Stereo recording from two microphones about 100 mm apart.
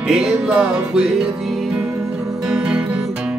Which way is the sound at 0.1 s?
5° right (ahead or behind).